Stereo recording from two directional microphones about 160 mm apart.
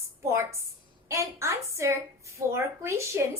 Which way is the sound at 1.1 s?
20° right (ahead or behind).